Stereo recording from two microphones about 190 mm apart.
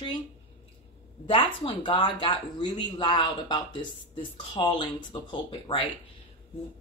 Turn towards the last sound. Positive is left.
turn(degrees=25)  # may be behind; listen again after turning